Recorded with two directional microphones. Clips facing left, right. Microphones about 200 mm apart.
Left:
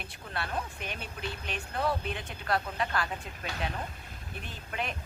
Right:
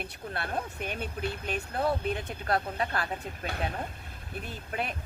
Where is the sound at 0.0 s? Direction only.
50° right (ahead or behind).